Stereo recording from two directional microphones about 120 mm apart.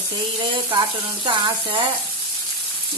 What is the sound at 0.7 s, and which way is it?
Frying, 40° right (ahead or behind).